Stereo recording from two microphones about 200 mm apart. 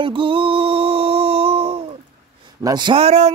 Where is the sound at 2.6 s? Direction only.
20° right (ahead or behind).